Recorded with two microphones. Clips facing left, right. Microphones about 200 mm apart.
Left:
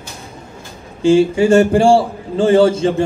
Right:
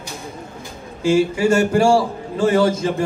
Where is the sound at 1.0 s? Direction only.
30° left (ahead or behind).